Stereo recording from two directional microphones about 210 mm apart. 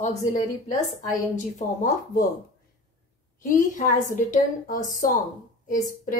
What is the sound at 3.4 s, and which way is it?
A woman's voice, 40° left (ahead or behind).